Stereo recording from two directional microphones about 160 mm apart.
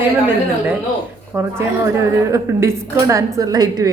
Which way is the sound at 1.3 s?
15° right (ahead or behind).